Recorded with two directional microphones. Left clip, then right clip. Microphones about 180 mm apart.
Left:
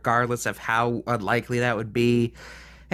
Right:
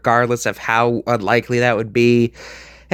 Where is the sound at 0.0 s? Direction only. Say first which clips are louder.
Right 7 dB; 30° right (ahead or behind).